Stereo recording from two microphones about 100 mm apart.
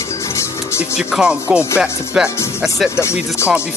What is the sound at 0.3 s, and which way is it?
Music, 25° left (ahead or behind).